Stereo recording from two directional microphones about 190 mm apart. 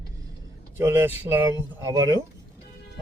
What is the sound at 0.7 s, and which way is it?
Speech, 10° right (ahead or behind).